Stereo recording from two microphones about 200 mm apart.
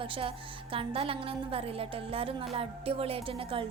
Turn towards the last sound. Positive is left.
turn(degrees=-30)  # may be behind; listen again after turning